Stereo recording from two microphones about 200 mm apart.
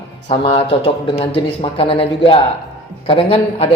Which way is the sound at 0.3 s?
25° left (ahead or behind).